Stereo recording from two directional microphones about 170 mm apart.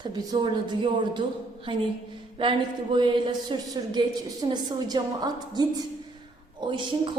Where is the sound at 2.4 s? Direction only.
30° right (ahead or behind).